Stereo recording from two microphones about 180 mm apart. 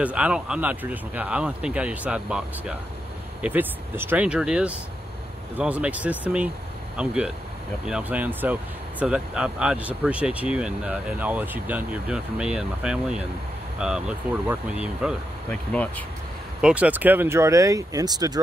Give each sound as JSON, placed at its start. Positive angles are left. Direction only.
{"t": 0.0, "sound": "speech", "side_deg": -5}
{"t": 15.5, "sound": "speech", "side_deg": 5}
{"t": 16.6, "sound": "speech", "side_deg": -5}